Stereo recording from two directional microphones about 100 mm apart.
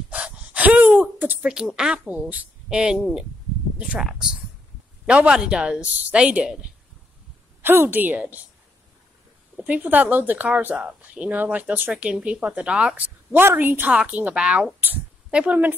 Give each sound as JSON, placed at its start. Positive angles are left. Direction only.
{"t": 0.1, "sound": "gasp", "side_deg": -15}
{"t": 1.5, "sound": "a woman's voice", "side_deg": -5}
{"t": 7.6, "sound": "a woman's voice", "side_deg": -20}
{"t": 9.6, "sound": "a woman's voice", "side_deg": -15}